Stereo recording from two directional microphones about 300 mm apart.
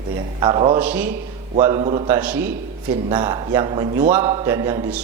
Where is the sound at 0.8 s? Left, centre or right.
Centre.